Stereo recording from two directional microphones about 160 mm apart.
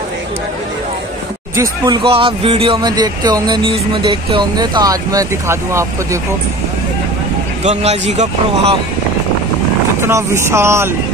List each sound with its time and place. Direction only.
1.6 s speech: 25° right (ahead or behind)
7.6 s a man's voice: 45° right (ahead or behind)
10.0 s speech: 15° right (ahead or behind)